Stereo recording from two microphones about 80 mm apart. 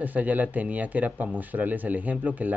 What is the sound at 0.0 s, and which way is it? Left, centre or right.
Speech, right.